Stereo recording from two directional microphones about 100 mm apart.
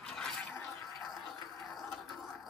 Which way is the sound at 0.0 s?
5° left (ahead or behind).